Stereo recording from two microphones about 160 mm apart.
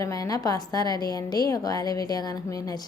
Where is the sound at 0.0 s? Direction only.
20° left (ahead or behind).